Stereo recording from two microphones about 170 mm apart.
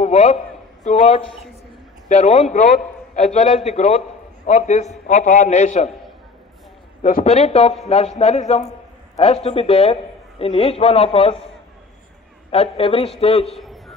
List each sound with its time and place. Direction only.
0.0 s a man's voice: 45° left (ahead or behind)
7.0 s a man's voice: 55° left (ahead or behind)
7.2 s a man's voice: 40° left (ahead or behind)
12.4 s a man's voice: 35° left (ahead or behind)
13.6 s a sound: centre (ahead or behind)